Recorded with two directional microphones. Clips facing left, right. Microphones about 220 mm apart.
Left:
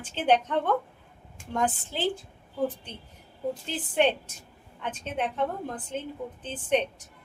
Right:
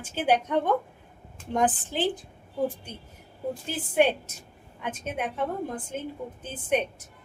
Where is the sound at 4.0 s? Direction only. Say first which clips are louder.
Right 2 dB; 10° right (ahead or behind).